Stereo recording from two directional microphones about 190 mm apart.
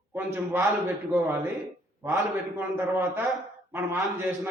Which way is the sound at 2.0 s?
15° right (ahead or behind).